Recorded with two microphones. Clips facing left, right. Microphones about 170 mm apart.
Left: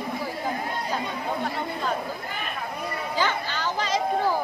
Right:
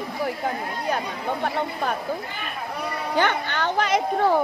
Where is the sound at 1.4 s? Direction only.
60° right (ahead or behind).